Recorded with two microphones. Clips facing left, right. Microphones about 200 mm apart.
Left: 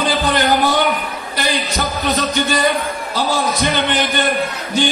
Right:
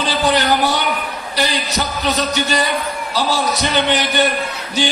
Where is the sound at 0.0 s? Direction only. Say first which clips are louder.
Even; 50° left (ahead or behind).